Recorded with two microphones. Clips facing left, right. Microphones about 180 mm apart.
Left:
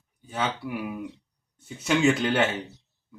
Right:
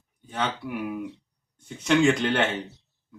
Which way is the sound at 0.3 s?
5° left (ahead or behind).